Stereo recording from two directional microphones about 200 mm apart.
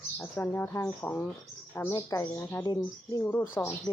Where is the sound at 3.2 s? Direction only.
10° left (ahead or behind).